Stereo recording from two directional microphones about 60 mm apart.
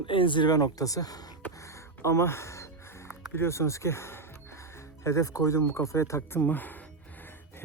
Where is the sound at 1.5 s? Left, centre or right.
Left.